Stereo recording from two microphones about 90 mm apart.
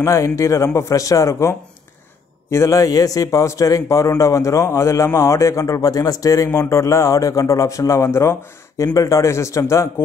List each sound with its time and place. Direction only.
0.0 s a man's voice: 35° left (ahead or behind)